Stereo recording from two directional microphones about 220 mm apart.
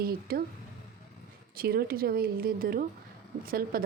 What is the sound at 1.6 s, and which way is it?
A woman's voice, 40° right (ahead or behind).